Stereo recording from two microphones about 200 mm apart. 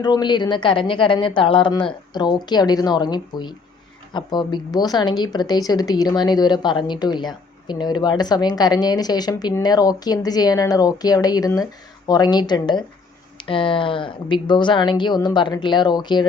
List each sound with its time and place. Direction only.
0.0 s speech: 20° left (ahead or behind)